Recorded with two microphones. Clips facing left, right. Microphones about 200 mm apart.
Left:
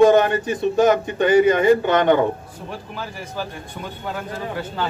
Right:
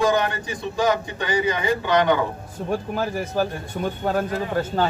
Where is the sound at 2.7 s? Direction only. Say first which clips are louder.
Right 8 dB; 45° right (ahead or behind).